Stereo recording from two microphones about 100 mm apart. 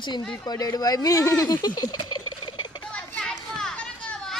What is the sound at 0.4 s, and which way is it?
Speech, 40° left (ahead or behind).